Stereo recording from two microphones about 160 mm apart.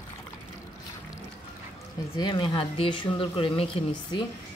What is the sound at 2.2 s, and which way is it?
Speech, 30° left (ahead or behind).